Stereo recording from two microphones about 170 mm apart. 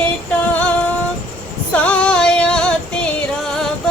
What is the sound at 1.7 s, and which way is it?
Music, 10° left (ahead or behind).